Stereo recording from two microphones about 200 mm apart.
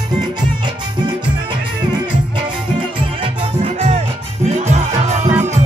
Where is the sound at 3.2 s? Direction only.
30° right (ahead or behind).